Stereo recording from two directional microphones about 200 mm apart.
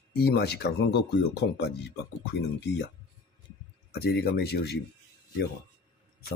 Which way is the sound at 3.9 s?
55° left (ahead or behind).